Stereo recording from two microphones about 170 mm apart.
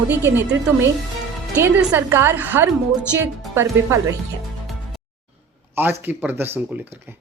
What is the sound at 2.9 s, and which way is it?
Speech, centre (ahead or behind).